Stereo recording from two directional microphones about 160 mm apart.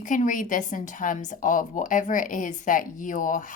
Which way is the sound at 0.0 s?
55° left (ahead or behind).